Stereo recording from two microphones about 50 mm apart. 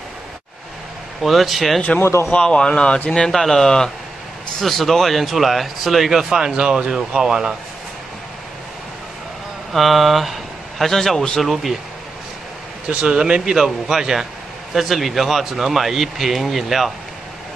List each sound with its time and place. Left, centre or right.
1.2 s speech: centre
2.3 s speech: centre
3.3 s speech: centre
9.7 s speech: centre
12.8 s speech: centre